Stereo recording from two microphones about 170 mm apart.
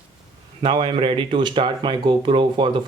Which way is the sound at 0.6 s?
30° right (ahead or behind).